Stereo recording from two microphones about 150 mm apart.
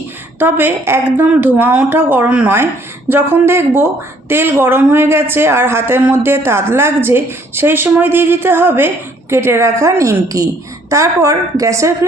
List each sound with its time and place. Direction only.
0.3 s a woman's voice: 15° right (ahead or behind)